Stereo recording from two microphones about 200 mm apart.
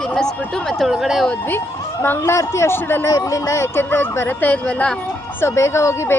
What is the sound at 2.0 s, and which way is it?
Speech, 10° left (ahead or behind).